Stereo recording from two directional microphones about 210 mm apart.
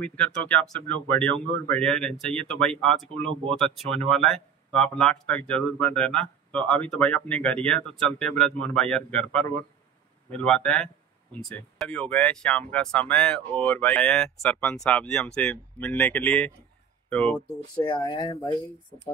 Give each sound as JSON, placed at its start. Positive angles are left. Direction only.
{"t": 0.0, "sound": "speech", "side_deg": 5}
{"t": 18.0, "sound": "speech", "side_deg": 20}